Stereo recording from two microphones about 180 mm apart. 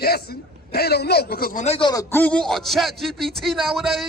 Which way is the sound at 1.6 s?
35° left (ahead or behind).